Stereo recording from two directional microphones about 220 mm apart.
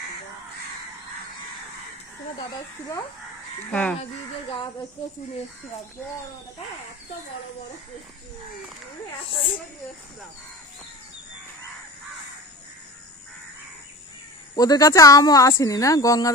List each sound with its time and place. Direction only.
3.7 s speech: 5° left (ahead or behind)
9.2 s a woman's voice: 25° left (ahead or behind)
14.5 s speech: 15° left (ahead or behind)